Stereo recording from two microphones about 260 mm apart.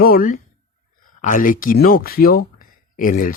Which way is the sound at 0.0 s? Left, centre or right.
Left.